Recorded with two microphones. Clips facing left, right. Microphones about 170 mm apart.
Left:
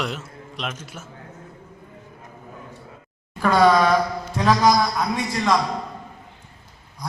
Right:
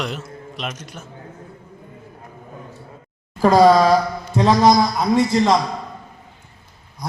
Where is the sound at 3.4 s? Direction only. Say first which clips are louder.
Right 4 dB; 35° right (ahead or behind).